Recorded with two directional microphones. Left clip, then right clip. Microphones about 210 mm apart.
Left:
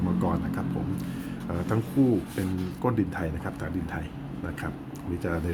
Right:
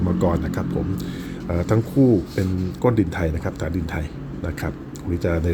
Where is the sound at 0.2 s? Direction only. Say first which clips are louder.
Right 7 dB; 20° right (ahead or behind).